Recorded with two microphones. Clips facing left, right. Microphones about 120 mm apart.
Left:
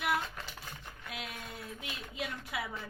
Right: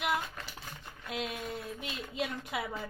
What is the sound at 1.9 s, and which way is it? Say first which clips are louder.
Speech: right 4 dB; 20° right (ahead or behind).